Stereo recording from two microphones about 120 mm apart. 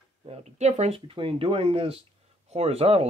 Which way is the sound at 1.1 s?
50° right (ahead or behind).